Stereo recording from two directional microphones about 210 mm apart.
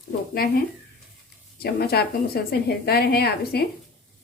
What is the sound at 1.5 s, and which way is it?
A woman's voice, 50° left (ahead or behind).